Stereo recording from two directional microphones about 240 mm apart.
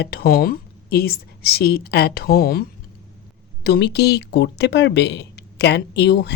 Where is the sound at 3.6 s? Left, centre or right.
Left.